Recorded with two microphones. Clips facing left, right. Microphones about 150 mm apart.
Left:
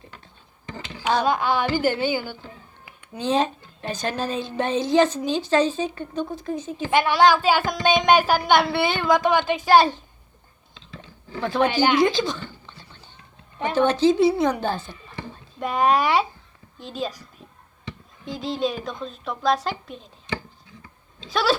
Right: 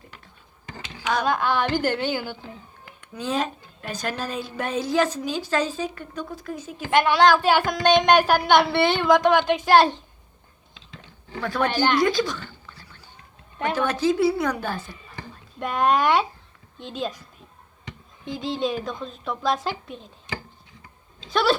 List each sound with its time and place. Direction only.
1.2 s a woman's voice: 10° left (ahead or behind)
3.2 s a woman's voice: 25° left (ahead or behind)
6.9 s a woman's voice: 5° left (ahead or behind)
11.3 s speech: 25° left (ahead or behind)
11.6 s a woman's voice: 5° left (ahead or behind)
12.0 s a sound: 25° left (ahead or behind)
13.7 s a woman's voice: 25° left (ahead or behind)
15.6 s a woman's voice: centre (ahead or behind)
18.3 s a woman's voice: centre (ahead or behind)
21.3 s a woman's voice: centre (ahead or behind)